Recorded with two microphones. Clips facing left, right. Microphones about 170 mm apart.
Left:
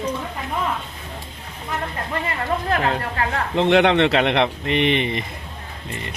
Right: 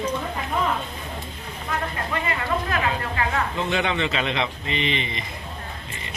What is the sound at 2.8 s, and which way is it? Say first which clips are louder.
Speech: left 3 dB; 60° left (ahead or behind).